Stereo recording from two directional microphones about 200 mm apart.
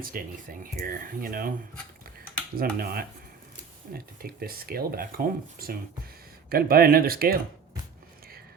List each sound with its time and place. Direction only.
0.1 s speech: 45° right (ahead or behind)
2.6 s speech: 45° right (ahead or behind)